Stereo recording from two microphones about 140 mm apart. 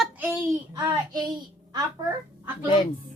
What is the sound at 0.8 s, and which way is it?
Speech, 30° right (ahead or behind).